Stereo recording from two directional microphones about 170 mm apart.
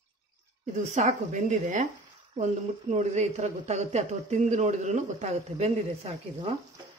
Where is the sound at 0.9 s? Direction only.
45° right (ahead or behind).